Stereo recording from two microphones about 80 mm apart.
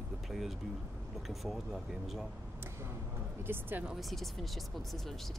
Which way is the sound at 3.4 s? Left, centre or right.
Right.